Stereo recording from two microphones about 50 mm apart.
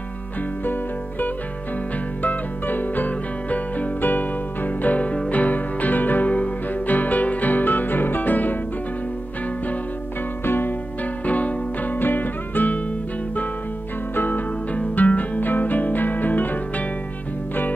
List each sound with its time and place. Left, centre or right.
2.2 s music: left
10.4 s music: left
11.2 s music: left
14.1 s music: left